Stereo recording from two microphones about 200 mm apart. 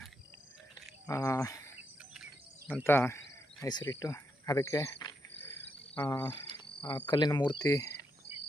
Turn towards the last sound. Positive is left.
turn(degrees=20)  # may be behind; listen again after turning